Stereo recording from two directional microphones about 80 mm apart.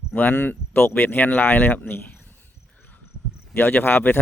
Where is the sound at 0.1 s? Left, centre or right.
Left.